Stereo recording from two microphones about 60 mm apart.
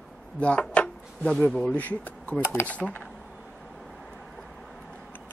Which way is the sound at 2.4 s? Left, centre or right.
Left.